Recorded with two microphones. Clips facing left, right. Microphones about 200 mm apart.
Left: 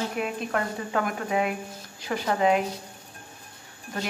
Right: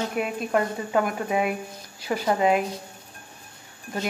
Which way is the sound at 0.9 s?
10° right (ahead or behind).